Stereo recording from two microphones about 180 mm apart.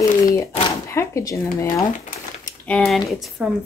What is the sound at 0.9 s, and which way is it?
Speech, 15° left (ahead or behind).